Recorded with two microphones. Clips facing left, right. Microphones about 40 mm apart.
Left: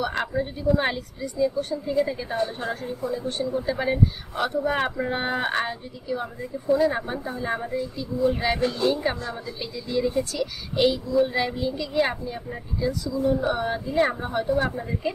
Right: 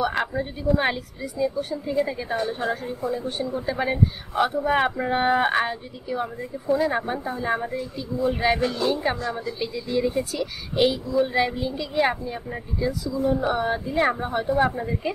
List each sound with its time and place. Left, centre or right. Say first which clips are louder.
0.0 s speech: right 1 dB; centre